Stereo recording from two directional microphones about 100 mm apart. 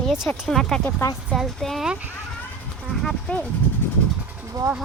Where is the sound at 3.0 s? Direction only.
10° left (ahead or behind).